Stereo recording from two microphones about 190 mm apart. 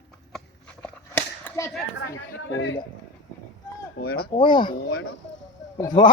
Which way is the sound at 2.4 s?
90° left.